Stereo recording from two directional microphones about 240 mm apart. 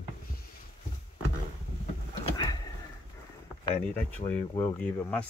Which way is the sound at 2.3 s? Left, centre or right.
Centre.